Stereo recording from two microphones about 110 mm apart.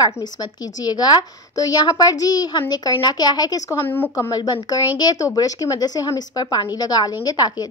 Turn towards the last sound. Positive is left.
turn(degrees=40)  # may be behind; listen again after turning